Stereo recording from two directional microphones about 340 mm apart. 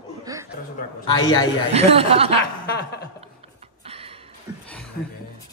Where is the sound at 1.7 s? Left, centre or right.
Centre.